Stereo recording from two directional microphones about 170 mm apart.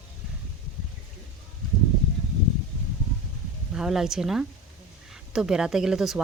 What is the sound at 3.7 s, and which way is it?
Speech, 5° right (ahead or behind).